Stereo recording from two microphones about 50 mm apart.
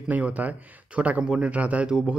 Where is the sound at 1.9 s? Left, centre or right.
Centre.